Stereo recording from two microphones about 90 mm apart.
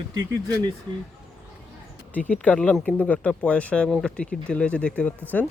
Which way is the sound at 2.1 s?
15° left (ahead or behind).